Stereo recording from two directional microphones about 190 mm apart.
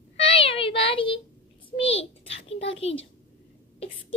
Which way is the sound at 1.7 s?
30° left (ahead or behind).